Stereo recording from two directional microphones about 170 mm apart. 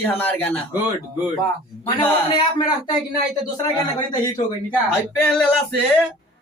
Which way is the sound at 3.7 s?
25° left (ahead or behind).